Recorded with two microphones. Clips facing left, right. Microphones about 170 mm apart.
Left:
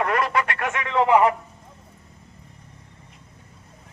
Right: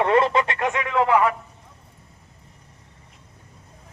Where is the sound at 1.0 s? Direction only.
20° left (ahead or behind).